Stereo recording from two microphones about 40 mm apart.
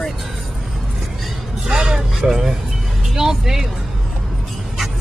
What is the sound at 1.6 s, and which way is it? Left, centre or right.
Vehicle, centre.